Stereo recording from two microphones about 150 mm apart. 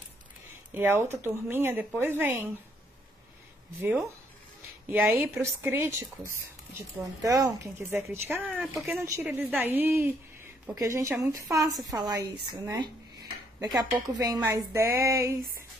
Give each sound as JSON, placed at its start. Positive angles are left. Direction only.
{"t": 0.5, "sound": "speech", "side_deg": -15}
{"t": 4.9, "sound": "speech", "side_deg": -15}
{"t": 8.5, "sound": "speech", "side_deg": -5}
{"t": 12.7, "sound": "a sound", "side_deg": -30}
{"t": 13.7, "sound": "speech", "side_deg": 0}
{"t": 14.2, "sound": "speech", "side_deg": -25}